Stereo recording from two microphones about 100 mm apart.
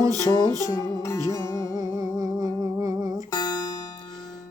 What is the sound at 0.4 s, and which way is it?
Music, 35° right (ahead or behind).